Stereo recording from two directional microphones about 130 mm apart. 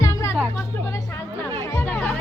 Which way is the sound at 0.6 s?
20° left (ahead or behind).